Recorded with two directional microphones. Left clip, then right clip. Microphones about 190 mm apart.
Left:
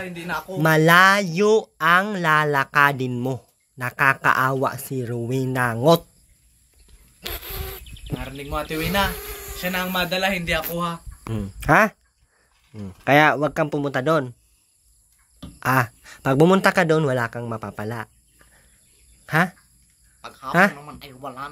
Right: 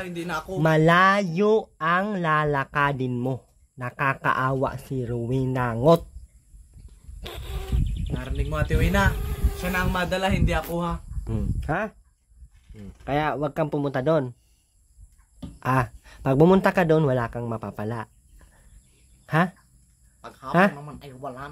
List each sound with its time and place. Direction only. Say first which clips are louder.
0.0 s a man's voice: left 2 dB; 45° right (ahead or behind)
0.6 s speech: left 4 dB; centre (ahead or behind)
7.2 s insect: left 5 dB; centre (ahead or behind)
8.2 s a man's voice: left 2 dB; 55° right (ahead or behind)
9.1 s a sound: left 3 dB; centre (ahead or behind)
9.6 s a man's voice: left 2 dB; 45° right (ahead or behind)
11.6 s speech: left 12 dB; 20° left (ahead or behind); by 14.3 s 5° right (ahead or behind)
15.6 s speech: left 4 dB; centre (ahead or behind)
20.2 s a sound: left 3 dB; 55° right (ahead or behind)
20.8 s a man's voice: left 1 dB; 50° right (ahead or behind)